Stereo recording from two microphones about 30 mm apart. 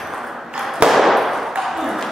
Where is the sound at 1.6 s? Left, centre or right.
Centre.